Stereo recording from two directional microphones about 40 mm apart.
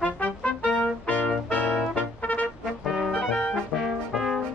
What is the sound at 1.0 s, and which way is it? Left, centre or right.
Music, left.